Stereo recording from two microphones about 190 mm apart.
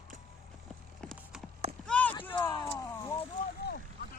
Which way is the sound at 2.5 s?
20° left (ahead or behind).